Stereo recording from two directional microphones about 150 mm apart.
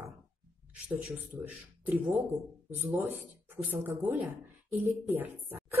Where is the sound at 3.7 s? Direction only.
10° right (ahead or behind).